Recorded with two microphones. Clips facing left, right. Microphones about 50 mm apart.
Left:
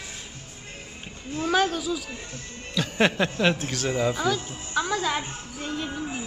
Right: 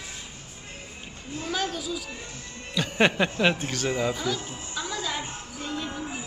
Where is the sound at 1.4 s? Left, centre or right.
Left.